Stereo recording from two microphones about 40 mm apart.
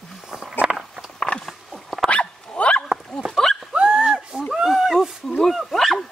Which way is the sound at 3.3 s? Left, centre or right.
Centre.